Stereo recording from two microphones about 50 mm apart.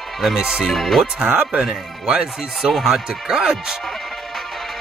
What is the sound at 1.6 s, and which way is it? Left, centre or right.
Speech, centre.